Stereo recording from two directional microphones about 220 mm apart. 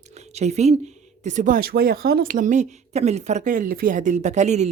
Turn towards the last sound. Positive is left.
turn(degrees=-30)  # may be behind; listen again after turning